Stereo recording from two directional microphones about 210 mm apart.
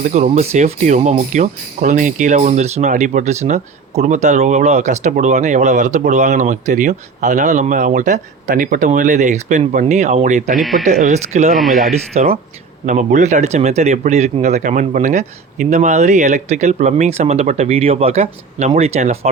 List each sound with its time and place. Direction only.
0.0 s speech: 35° right (ahead or behind)
10.6 s speech: centre (ahead or behind)
11.9 s speech: 30° right (ahead or behind)